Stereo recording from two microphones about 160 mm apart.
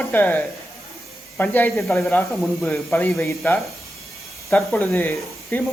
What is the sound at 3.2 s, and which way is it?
Speech, 15° left (ahead or behind).